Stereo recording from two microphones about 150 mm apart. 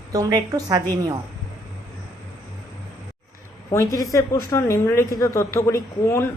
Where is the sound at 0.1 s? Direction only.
25° right (ahead or behind).